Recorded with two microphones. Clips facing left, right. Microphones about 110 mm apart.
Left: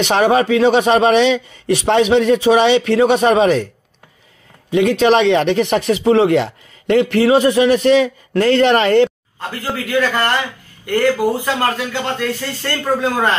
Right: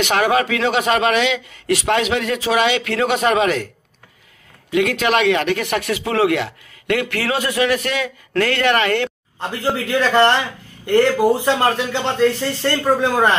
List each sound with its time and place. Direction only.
0.0 s speech: 30° left (ahead or behind)
4.6 s speech: 25° left (ahead or behind)
9.4 s speech: 20° right (ahead or behind)